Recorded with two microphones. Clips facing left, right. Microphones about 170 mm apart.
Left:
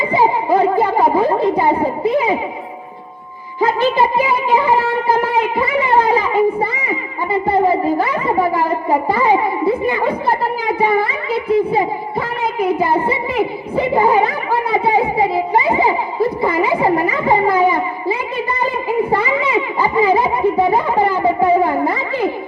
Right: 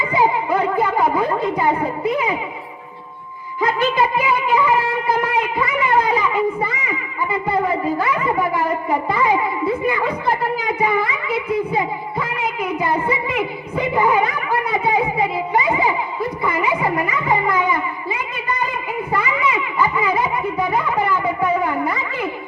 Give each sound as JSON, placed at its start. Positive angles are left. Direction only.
{"t": 0.1, "sound": "speech", "side_deg": 30}
{"t": 3.6, "sound": "speech", "side_deg": 30}
{"t": 18.6, "sound": "a sound", "side_deg": 30}